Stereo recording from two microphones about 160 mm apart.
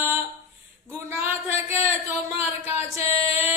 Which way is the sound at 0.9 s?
15° right (ahead or behind).